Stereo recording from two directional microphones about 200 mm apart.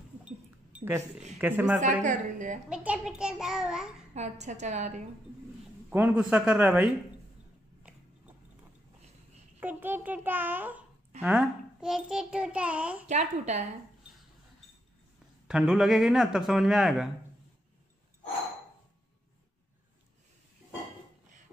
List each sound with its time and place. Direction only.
0.7 s a man's voice: 10° right (ahead or behind)
1.8 s a woman's voice: 40° right (ahead or behind)
2.7 s a child's voice: 5° right (ahead or behind)
4.1 s a woman's voice: 35° right (ahead or behind)
5.9 s a man's voice: 5° right (ahead or behind)
9.6 s a child's voice: 10° right (ahead or behind)
13.1 s a woman's voice: 35° right (ahead or behind)
15.4 s a child's voice: 5° right (ahead or behind)